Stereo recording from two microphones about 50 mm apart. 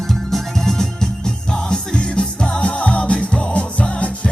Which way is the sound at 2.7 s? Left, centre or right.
Left.